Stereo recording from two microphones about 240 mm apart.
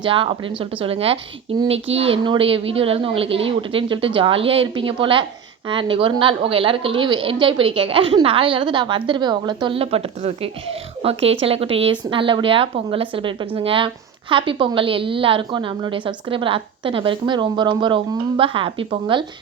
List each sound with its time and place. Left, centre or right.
0.0 s a woman's voice: right